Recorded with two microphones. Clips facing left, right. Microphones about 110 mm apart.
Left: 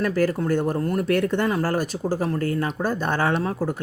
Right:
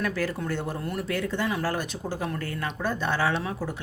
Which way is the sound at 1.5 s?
45° left (ahead or behind).